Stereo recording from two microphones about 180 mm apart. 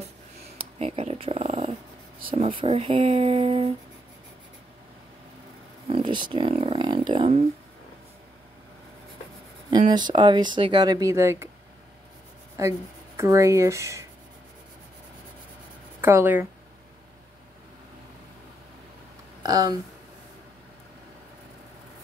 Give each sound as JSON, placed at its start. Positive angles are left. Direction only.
{"t": 0.6, "sound": "speech", "side_deg": -35}
{"t": 5.9, "sound": "speech", "side_deg": -25}
{"t": 9.7, "sound": "speech", "side_deg": -25}
{"t": 12.5, "sound": "speech", "side_deg": -15}
{"t": 16.0, "sound": "speech", "side_deg": -15}
{"t": 19.4, "sound": "speech", "side_deg": -20}